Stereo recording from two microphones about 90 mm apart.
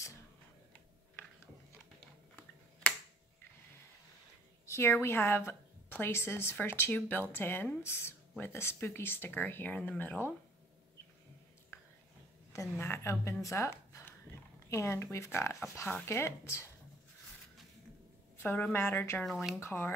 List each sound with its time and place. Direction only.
2.8 s finger snapping: 15° left (ahead or behind)
4.6 s a sound: 30° left (ahead or behind)
5.0 s speech: 30° left (ahead or behind)
11.7 s whispering: 30° left (ahead or behind)
12.8 s speech: 30° left (ahead or behind)
18.4 s speech: 20° left (ahead or behind)
19.2 s speech: centre (ahead or behind)
19.6 s speech: 25° left (ahead or behind)